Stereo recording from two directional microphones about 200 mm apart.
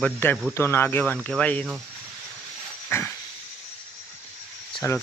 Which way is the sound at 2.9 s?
10° left (ahead or behind).